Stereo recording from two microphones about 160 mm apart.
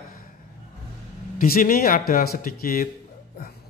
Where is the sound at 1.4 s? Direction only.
60° left (ahead or behind).